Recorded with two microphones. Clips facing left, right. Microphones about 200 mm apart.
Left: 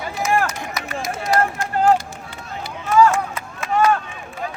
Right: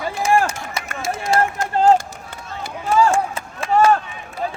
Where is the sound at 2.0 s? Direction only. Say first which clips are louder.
Right 1 dB; 50° right (ahead or behind).